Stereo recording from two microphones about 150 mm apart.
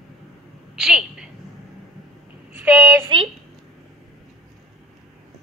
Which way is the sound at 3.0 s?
35° right (ahead or behind).